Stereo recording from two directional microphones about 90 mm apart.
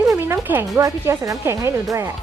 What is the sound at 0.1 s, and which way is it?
Music, 25° right (ahead or behind).